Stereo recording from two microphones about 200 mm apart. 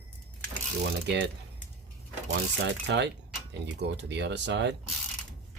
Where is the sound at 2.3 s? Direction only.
60° right (ahead or behind).